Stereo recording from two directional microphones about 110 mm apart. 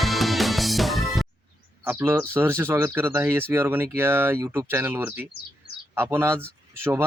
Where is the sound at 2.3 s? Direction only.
20° right (ahead or behind).